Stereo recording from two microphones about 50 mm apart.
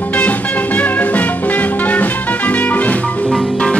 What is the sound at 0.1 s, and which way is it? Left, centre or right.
Music, left.